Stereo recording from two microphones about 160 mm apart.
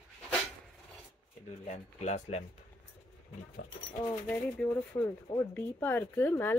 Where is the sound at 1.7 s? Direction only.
45° left (ahead or behind).